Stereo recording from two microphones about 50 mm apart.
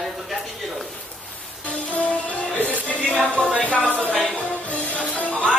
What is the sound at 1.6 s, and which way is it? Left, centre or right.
Music, left.